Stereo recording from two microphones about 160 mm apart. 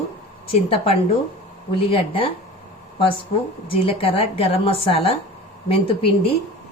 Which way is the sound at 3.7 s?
35° left (ahead or behind).